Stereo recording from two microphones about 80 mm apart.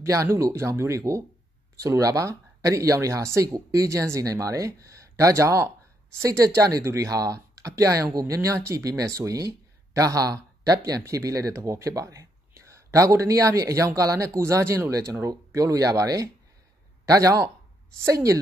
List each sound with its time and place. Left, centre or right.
0.0 s speech: right